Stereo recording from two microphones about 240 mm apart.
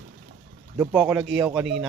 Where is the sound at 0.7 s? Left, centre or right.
Centre.